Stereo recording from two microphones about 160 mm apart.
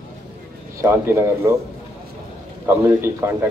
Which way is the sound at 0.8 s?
15° right (ahead or behind).